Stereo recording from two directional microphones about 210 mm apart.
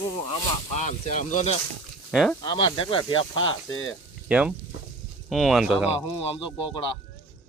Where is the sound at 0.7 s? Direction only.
35° left (ahead or behind).